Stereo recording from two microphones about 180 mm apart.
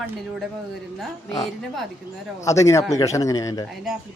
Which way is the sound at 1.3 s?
20° left (ahead or behind).